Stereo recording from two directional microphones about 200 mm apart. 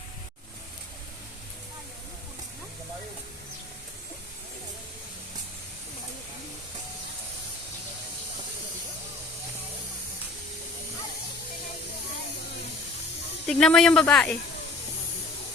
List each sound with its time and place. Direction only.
13.5 s speech: 5° left (ahead or behind)